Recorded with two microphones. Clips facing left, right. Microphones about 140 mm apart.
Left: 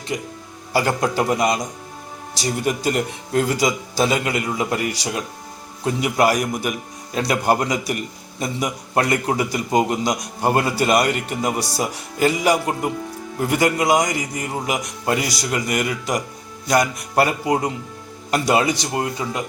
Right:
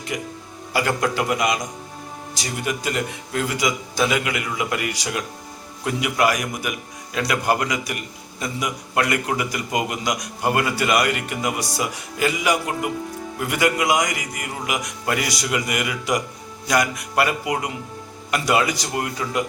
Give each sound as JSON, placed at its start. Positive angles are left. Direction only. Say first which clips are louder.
{"t": 0.1, "sound": "a man's voice", "louder": "left 3 dB", "side_deg": 25}